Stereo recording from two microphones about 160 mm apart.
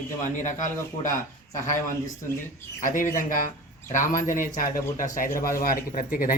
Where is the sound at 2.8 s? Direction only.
60° left (ahead or behind).